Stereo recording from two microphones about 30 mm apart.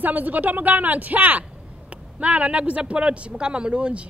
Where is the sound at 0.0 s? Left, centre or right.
Right.